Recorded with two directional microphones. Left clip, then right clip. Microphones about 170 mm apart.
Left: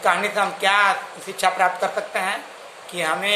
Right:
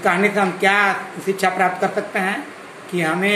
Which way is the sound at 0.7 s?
10° left (ahead or behind).